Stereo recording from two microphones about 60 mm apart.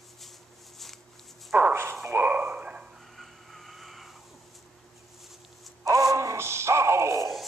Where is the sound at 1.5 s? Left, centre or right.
Right.